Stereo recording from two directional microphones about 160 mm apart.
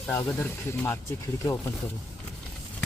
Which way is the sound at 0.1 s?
15° left (ahead or behind).